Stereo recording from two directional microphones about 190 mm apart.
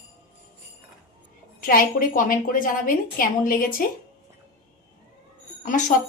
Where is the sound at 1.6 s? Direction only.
50° left (ahead or behind).